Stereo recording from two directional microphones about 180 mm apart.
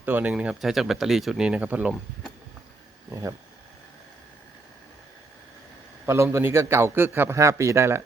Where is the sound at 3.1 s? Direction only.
20° right (ahead or behind).